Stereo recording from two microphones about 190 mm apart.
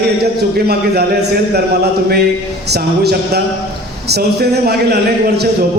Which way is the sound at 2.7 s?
60° right (ahead or behind).